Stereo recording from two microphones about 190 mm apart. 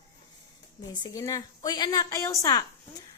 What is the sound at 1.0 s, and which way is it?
A woman's voice, 20° left (ahead or behind).